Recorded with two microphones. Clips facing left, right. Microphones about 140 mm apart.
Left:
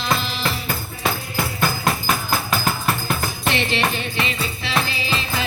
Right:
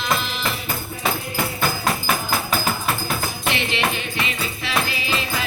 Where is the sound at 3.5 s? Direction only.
35° left (ahead or behind).